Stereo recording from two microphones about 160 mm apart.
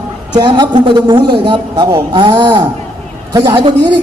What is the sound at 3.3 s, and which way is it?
Speech, 25° right (ahead or behind).